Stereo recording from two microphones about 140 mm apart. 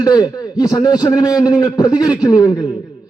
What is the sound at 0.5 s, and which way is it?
A man's voice, 25° left (ahead or behind).